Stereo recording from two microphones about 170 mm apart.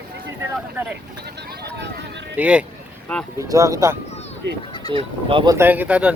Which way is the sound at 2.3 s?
5° right (ahead or behind).